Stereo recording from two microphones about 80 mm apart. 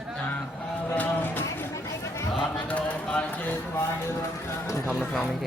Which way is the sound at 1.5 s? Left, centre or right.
Left.